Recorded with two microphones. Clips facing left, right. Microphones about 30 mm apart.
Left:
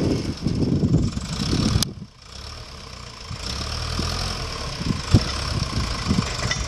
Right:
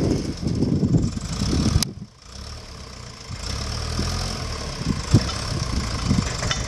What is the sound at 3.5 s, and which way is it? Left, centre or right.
Vehicle, left.